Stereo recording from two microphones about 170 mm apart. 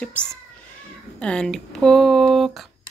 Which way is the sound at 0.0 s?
5° left (ahead or behind).